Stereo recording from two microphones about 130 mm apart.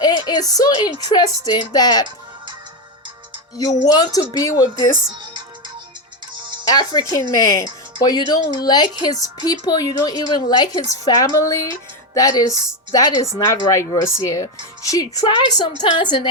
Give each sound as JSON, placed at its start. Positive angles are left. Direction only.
{"t": 0.0, "sound": "a woman's voice", "side_deg": 30}
{"t": 3.8, "sound": "a woman's voice", "side_deg": 30}
{"t": 6.3, "sound": "music", "side_deg": -35}
{"t": 6.7, "sound": "a woman's voice", "side_deg": 30}